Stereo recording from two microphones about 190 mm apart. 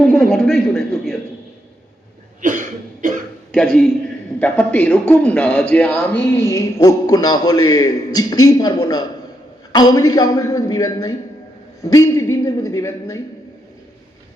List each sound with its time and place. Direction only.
0.0 s a man's voice: centre (ahead or behind)
2.4 s cough: 45° right (ahead or behind)
3.5 s a man's voice: 5° left (ahead or behind)